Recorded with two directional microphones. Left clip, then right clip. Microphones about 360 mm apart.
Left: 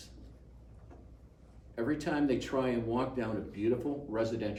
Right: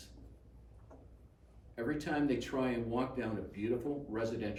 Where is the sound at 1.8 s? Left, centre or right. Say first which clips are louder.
Left 3 dB; centre.